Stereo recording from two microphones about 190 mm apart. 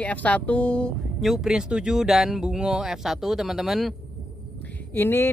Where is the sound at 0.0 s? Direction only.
5° left (ahead or behind).